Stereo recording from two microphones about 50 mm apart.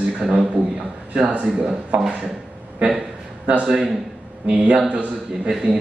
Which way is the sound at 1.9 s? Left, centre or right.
Centre.